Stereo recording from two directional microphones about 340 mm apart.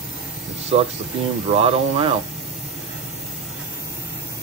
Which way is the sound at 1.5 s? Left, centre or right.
Centre.